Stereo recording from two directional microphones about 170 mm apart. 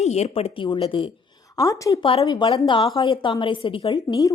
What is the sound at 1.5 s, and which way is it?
A woman's voice, 20° left (ahead or behind).